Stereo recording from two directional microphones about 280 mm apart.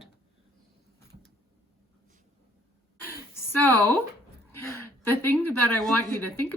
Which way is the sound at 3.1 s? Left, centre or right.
Centre.